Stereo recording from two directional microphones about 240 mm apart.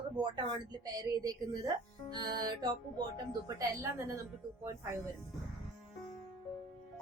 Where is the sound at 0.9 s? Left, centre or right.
Centre.